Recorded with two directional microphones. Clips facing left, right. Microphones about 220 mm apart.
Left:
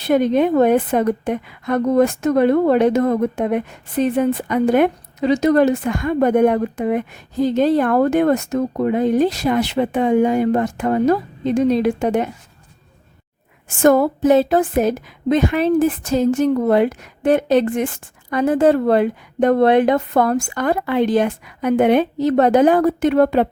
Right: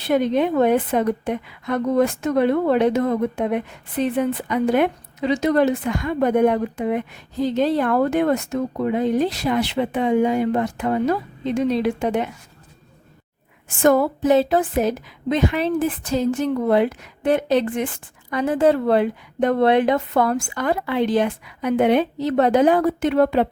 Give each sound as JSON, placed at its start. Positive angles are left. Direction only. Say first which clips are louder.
{"t": 0.0, "sound": "a woman's voice", "louder": "left 3 dB", "side_deg": 45}
{"t": 13.8, "sound": "a woman's voice", "louder": "left 3 dB", "side_deg": 45}